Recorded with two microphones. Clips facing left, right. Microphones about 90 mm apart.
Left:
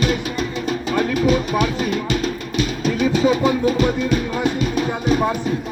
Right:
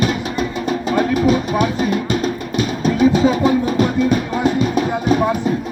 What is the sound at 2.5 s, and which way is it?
Music, 40° right (ahead or behind).